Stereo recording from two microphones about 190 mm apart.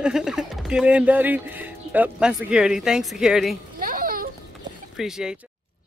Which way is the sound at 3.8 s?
50° right (ahead or behind).